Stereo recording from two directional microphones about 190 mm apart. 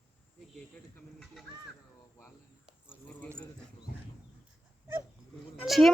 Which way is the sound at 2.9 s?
5° left (ahead or behind).